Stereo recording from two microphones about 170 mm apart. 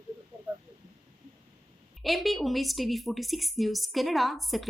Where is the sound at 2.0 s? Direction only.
Centre (ahead or behind).